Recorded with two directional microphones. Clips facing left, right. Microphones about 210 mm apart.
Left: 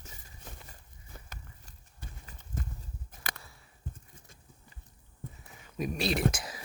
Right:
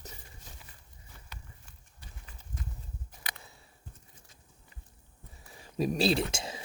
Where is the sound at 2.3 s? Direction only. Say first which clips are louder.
Left 4 dB; 45° left (ahead or behind).